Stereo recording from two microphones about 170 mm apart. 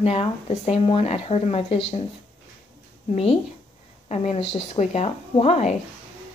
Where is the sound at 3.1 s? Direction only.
35° left (ahead or behind).